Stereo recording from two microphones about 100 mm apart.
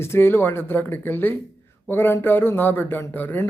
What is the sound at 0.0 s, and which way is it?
Speech, 25° left (ahead or behind).